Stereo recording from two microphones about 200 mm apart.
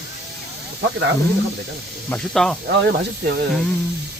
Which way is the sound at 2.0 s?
5° left (ahead or behind).